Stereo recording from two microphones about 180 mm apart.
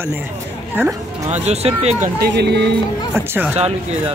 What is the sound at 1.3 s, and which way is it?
Speech, 35° right (ahead or behind).